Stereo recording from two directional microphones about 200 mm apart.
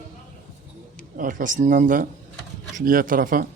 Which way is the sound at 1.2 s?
40° right (ahead or behind).